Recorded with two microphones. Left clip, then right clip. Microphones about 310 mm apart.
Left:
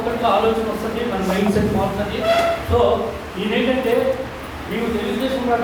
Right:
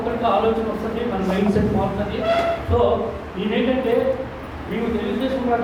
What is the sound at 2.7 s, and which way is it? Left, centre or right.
Speech, right.